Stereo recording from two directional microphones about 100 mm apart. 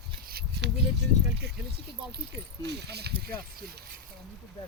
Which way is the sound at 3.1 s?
65° right (ahead or behind).